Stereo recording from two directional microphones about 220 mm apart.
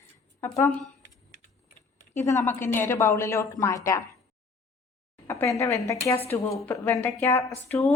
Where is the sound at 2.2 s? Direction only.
15° left (ahead or behind).